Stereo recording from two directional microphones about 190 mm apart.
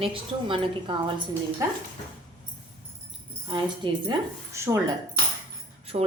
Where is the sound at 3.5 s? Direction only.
25° right (ahead or behind).